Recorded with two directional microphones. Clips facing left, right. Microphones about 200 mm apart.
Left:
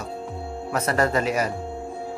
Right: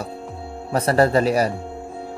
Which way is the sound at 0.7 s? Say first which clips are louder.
Right 5 dB; 30° right (ahead or behind).